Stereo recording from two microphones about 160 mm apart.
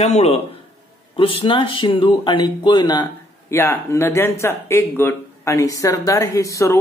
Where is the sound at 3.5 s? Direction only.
15° left (ahead or behind).